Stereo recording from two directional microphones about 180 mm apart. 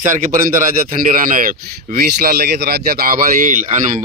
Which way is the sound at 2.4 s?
60° right (ahead or behind).